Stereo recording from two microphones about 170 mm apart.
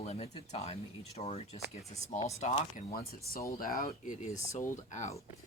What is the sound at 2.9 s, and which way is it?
Speech, 60° left (ahead or behind).